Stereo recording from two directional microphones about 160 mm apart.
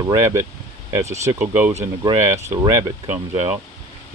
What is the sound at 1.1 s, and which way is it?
Speech, 45° right (ahead or behind).